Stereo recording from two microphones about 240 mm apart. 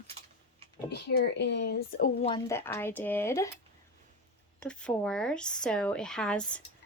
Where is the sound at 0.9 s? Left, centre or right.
Left.